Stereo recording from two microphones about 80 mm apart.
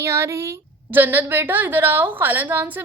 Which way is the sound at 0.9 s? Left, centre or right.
Right.